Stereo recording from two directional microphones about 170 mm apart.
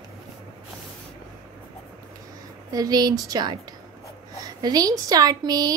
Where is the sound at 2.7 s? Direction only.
20° right (ahead or behind).